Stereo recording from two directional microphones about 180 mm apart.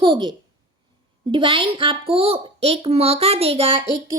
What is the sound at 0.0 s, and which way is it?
A woman's voice, 25° right (ahead or behind).